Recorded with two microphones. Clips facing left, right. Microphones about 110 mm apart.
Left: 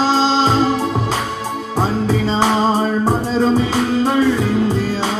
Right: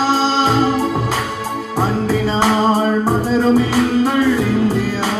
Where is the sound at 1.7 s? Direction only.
20° left (ahead or behind).